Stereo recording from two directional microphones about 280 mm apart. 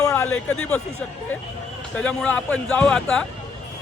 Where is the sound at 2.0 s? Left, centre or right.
Centre.